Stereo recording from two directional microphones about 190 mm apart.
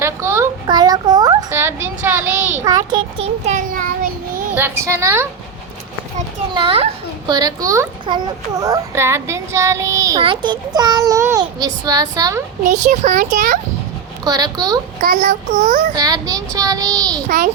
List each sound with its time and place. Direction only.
0.0 s a sound: 15° right (ahead or behind)
2.6 s a child's voice: 20° right (ahead or behind)
3.4 s child singing: 40° right (ahead or behind)
4.5 s a child's voice: 10° right (ahead or behind)
6.5 s a child's voice: 25° right (ahead or behind)
12.6 s a child's voice: 40° right (ahead or behind)
14.3 s a child's voice: 20° right (ahead or behind)
15.0 s a child's voice: 50° right (ahead or behind)
15.9 s a child's voice: 20° right (ahead or behind)
17.2 s a child's voice: 50° right (ahead or behind)